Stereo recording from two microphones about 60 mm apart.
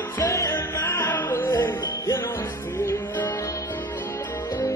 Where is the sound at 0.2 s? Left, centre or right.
Left.